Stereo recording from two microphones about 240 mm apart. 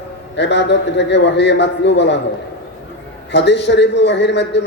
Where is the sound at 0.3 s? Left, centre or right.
Left.